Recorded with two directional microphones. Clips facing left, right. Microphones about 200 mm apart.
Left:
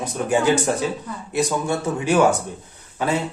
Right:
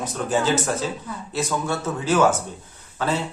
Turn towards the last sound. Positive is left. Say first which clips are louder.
# left 2 dB
turn(degrees=10)  # may be behind; listen again after turning